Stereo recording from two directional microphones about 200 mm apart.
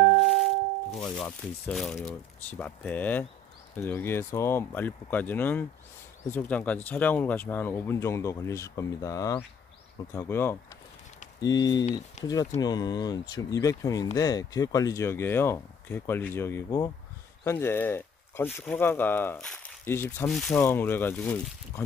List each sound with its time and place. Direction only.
0.2 s music: centre (ahead or behind)
0.9 s speech: 5° left (ahead or behind)
20.2 s speech: centre (ahead or behind)
20.5 s speech: 10° left (ahead or behind)